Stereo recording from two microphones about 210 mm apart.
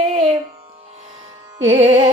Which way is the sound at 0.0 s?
30° right (ahead or behind).